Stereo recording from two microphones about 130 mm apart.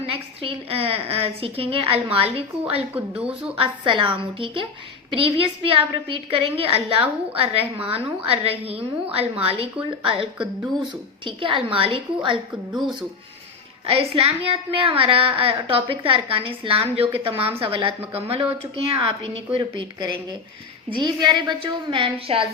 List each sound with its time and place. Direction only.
0.1 s a woman's voice: 45° right (ahead or behind)
2.9 s speech: 10° right (ahead or behind)
3.6 s a woman's voice: 40° right (ahead or behind)
5.1 s a woman's voice: 45° right (ahead or behind)
11.3 s a woman's voice: 40° right (ahead or behind)
13.8 s a woman's voice: 50° right (ahead or behind)